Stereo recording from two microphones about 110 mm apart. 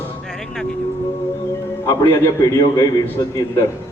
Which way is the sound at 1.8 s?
35° left (ahead or behind).